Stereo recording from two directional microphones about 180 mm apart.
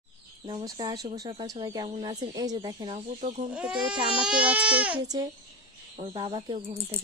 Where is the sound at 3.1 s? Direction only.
40° right (ahead or behind).